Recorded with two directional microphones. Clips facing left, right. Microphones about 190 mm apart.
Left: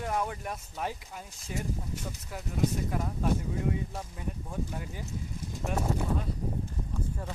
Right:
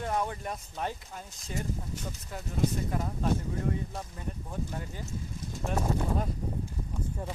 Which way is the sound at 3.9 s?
5° left (ahead or behind).